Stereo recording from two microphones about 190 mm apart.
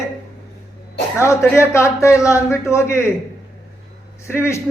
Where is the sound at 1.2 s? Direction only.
15° left (ahead or behind).